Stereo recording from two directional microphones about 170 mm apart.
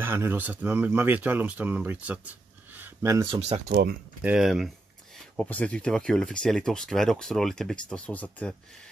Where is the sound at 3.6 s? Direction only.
65° right (ahead or behind).